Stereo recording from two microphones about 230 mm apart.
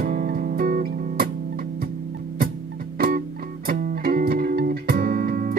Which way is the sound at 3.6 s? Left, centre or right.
Right.